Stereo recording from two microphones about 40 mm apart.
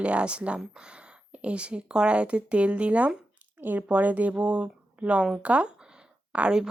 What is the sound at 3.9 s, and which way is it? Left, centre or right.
Speech, right.